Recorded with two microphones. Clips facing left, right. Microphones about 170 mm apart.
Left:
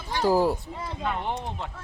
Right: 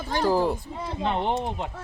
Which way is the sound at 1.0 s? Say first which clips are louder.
Right 5 dB; 25° right (ahead or behind).